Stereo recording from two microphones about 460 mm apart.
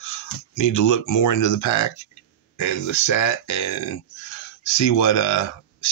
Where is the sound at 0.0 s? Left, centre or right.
Left.